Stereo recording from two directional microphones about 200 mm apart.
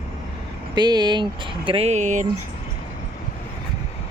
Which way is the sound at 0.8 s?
20° right (ahead or behind).